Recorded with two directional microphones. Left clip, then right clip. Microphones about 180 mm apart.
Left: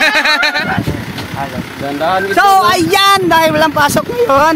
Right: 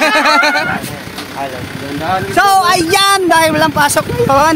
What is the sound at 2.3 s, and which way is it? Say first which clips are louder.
Speech: even; centre (ahead or behind).